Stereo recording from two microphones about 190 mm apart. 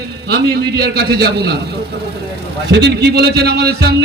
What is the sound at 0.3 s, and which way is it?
A man's voice, 55° right (ahead or behind).